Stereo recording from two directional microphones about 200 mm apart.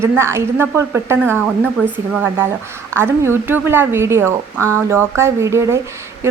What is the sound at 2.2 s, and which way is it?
A woman's voice, 10° right (ahead or behind).